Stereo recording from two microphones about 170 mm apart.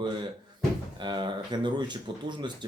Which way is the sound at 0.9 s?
25° right (ahead or behind).